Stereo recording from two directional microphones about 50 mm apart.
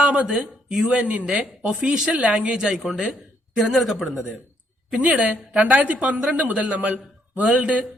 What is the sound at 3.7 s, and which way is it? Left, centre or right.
Speech, centre.